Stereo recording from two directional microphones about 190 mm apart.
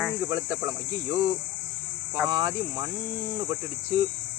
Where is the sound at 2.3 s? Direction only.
20° right (ahead or behind).